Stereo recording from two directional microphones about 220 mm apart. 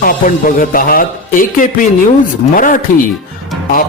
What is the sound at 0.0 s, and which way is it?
Speech, 40° left (ahead or behind).